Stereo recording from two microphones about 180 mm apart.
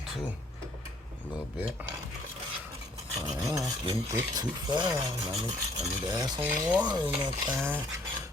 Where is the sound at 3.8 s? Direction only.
20° right (ahead or behind).